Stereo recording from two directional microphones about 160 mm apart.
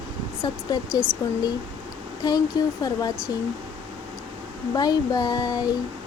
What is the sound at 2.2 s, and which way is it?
Speech, 25° left (ahead or behind).